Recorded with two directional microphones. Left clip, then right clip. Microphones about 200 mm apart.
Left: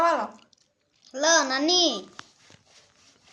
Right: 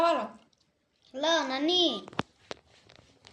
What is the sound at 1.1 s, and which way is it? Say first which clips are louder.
Speech: left 6 dB; 20° left (ahead or behind).